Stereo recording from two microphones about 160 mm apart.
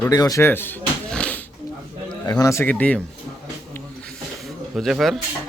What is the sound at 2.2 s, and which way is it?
Speech, 20° left (ahead or behind).